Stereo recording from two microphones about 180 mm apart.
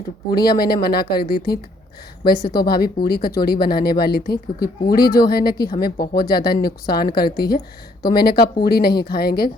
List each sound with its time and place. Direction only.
0.4 s speech: 60° left (ahead or behind)